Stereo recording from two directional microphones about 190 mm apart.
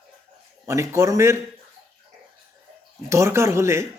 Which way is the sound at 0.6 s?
15° right (ahead or behind).